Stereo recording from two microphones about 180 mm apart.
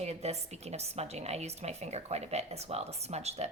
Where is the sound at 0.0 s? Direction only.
35° right (ahead or behind).